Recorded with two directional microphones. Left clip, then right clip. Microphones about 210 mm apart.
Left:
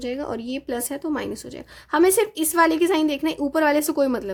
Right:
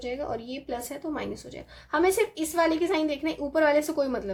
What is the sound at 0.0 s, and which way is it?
A woman's voice, 45° left (ahead or behind).